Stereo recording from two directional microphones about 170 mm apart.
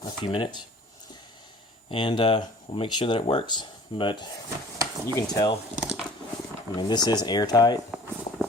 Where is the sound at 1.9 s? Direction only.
30° left (ahead or behind).